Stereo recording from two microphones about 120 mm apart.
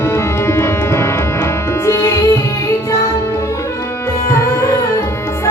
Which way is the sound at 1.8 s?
25° left (ahead or behind).